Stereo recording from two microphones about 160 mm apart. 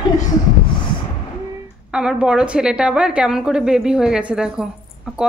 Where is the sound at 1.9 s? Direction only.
5° right (ahead or behind).